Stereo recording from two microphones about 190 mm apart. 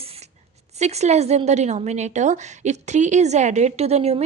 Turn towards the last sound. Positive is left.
turn(degrees=-35)  # may be behind; listen again after turning